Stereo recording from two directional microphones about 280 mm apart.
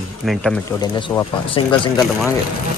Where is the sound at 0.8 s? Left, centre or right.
Centre.